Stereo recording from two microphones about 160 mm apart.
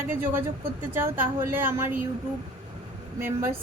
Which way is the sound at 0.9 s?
15° right (ahead or behind).